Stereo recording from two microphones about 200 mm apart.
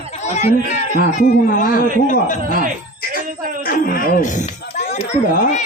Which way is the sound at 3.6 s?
45° left (ahead or behind).